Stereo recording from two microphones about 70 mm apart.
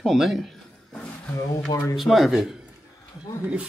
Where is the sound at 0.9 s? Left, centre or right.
Left.